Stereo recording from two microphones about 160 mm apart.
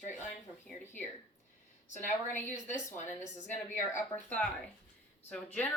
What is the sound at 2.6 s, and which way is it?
Speech, 50° left (ahead or behind).